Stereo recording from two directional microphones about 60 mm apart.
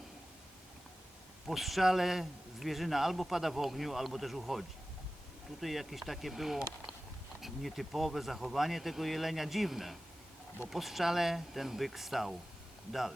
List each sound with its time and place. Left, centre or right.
1.5 s speech: centre